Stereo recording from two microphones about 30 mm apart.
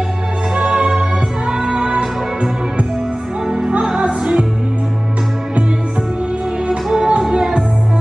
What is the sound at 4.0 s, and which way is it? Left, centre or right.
Music, right.